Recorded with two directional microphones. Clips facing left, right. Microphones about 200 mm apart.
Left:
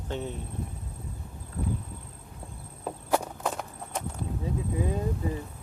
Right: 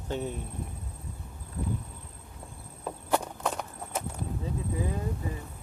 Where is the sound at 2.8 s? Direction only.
10° left (ahead or behind).